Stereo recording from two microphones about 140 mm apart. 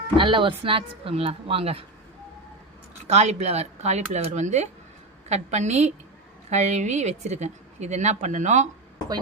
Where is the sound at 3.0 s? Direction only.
50° right (ahead or behind).